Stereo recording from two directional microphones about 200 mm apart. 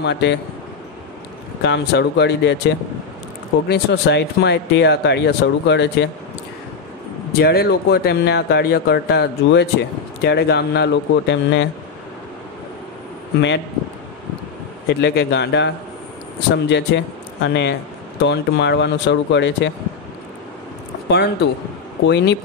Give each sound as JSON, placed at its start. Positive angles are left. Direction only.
{"t": 0.0, "sound": "speech", "side_deg": 60}
{"t": 1.6, "sound": "speech", "side_deg": 60}
{"t": 3.6, "sound": "speech", "side_deg": 55}
{"t": 7.3, "sound": "speech", "side_deg": 50}
{"t": 14.9, "sound": "speech", "side_deg": 60}
{"t": 21.1, "sound": "speech", "side_deg": 55}